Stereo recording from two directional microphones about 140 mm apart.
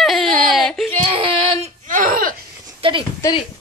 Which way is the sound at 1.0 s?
40° right (ahead or behind).